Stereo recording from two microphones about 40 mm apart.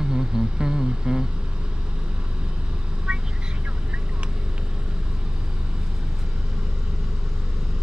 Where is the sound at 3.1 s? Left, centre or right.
Centre.